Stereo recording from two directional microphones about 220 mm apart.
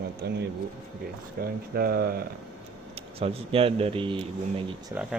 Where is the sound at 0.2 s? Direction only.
50° right (ahead or behind).